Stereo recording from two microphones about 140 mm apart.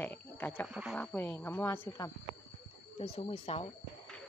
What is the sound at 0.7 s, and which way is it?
Speech, 5° right (ahead or behind).